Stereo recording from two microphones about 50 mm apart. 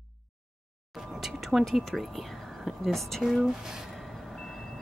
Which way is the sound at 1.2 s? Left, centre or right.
Centre.